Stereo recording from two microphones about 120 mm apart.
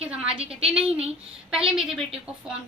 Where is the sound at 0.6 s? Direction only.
5° right (ahead or behind).